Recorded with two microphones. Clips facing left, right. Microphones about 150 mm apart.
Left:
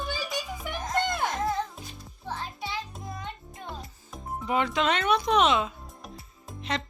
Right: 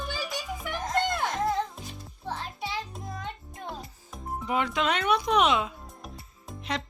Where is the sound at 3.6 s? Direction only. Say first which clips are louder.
Right 2 dB; centre (ahead or behind).